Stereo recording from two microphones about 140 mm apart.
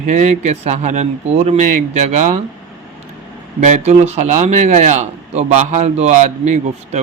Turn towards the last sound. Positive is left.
turn(degrees=-55)  # may be behind; listen again after turning